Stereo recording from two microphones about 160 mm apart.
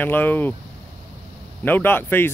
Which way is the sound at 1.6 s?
10° left (ahead or behind).